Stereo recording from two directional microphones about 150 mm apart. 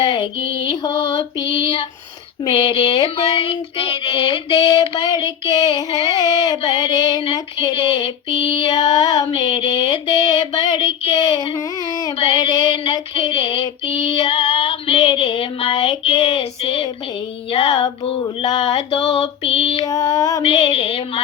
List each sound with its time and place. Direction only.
0.0 s mantra: 35° left (ahead or behind)
1.5 s female singing: 35° left (ahead or behind)
11.3 s a sound: 25° left (ahead or behind)
12.1 s female singing: 35° left (ahead or behind)
19.8 s a sound: 25° left (ahead or behind)
20.4 s female singing: 40° left (ahead or behind)